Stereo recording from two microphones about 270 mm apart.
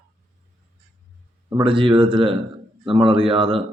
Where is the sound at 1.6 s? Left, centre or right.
Centre.